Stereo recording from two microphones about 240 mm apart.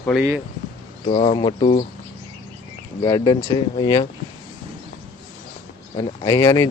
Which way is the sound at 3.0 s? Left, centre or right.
Centre.